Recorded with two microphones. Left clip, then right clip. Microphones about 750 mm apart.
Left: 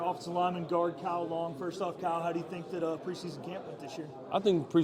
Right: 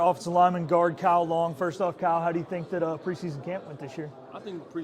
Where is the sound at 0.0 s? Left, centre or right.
Right.